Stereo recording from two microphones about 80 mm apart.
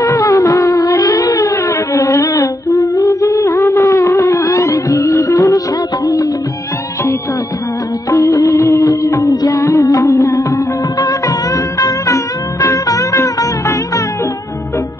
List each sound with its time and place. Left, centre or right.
0.0 s music: left
2.0 s humming: left
8.1 s music of bollywood: left